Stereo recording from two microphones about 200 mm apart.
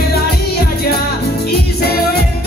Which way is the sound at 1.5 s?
50° left (ahead or behind).